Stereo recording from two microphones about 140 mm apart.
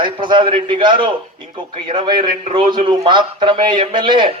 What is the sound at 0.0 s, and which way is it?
A man's voice, 35° right (ahead or behind).